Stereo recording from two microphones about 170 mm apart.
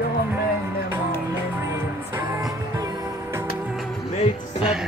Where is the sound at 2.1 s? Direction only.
20° right (ahead or behind).